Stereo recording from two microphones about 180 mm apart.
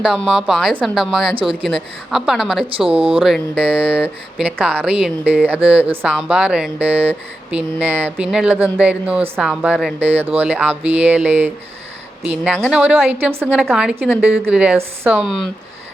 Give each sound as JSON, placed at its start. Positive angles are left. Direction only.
{"t": 0.0, "sound": "a woman's voice", "side_deg": -5}
{"t": 2.6, "sound": "speech", "side_deg": -30}
{"t": 3.2, "sound": "a woman's voice", "side_deg": 0}